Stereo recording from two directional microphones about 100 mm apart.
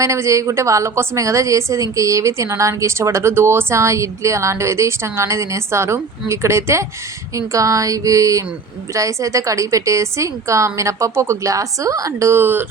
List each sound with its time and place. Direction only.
0.0 s a woman's voice: 30° right (ahead or behind)